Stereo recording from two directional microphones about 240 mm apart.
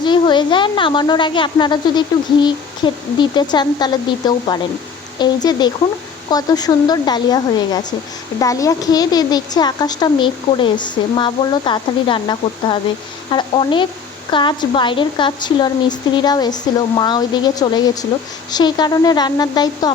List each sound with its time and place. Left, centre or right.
0.0 s a woman's voice: centre